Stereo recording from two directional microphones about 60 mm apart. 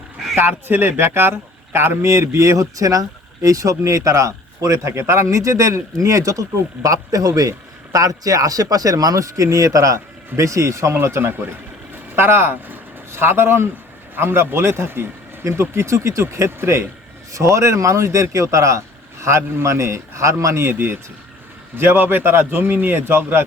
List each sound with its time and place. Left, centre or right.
0.3 s a man's voice: right
6.8 s a man's voice: right
15.7 s a man's voice: right
17.3 s speech: right
19.2 s a man's voice: right